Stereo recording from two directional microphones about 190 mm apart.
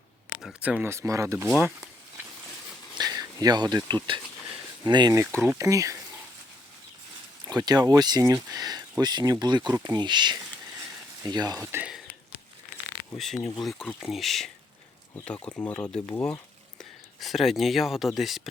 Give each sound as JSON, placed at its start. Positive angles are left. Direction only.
{"t": 0.4, "sound": "speech", "side_deg": -5}
{"t": 1.5, "sound": "speech", "side_deg": -5}
{"t": 3.0, "sound": "speech", "side_deg": -20}
{"t": 7.4, "sound": "speech", "side_deg": -20}
{"t": 9.6, "sound": "speech", "side_deg": -10}
{"t": 9.9, "sound": "speech", "side_deg": -25}
{"t": 13.1, "sound": "speech", "side_deg": 0}
{"t": 17.2, "sound": "speech", "side_deg": 0}